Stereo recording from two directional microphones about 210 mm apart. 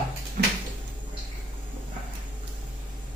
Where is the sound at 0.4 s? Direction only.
40° right (ahead or behind).